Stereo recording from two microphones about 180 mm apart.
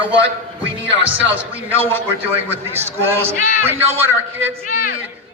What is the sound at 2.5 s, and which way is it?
A man's voice, 15° right (ahead or behind).